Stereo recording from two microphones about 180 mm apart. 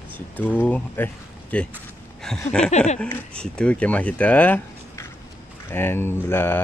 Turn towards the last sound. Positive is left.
turn(degrees=10)  # may be behind; listen again after turning